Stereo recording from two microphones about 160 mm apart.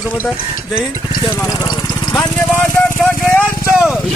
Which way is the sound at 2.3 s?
10° left (ahead or behind).